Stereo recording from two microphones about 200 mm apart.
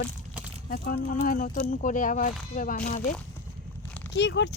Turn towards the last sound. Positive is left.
turn(degrees=60)  # may be behind; listen again after turning